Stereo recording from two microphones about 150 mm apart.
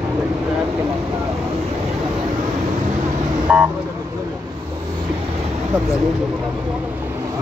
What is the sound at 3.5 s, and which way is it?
Vehicle, centre (ahead or behind).